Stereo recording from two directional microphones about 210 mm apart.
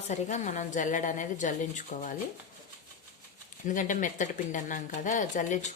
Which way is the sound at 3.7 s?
40° left (ahead or behind).